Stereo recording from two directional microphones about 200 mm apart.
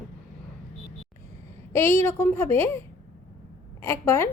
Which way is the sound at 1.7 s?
10° left (ahead or behind).